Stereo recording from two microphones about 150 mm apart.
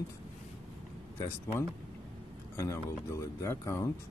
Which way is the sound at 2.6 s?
20° left (ahead or behind).